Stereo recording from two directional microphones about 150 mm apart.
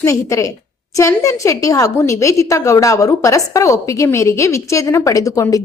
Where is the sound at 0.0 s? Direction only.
20° left (ahead or behind).